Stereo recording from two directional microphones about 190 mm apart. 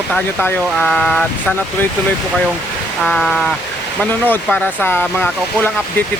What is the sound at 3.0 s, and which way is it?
Speech, centre (ahead or behind).